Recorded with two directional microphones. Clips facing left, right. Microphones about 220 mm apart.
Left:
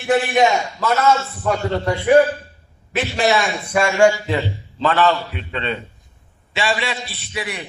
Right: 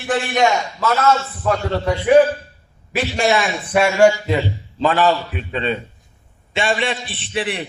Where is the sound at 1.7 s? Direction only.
Centre (ahead or behind); by 5.8 s 15° right (ahead or behind).